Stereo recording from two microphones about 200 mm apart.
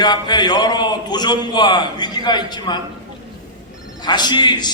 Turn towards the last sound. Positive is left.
turn(degrees=20)  # may be behind; listen again after turning